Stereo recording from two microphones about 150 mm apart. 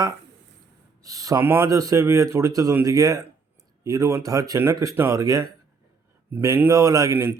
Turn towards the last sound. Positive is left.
turn(degrees=-15)  # may be behind; listen again after turning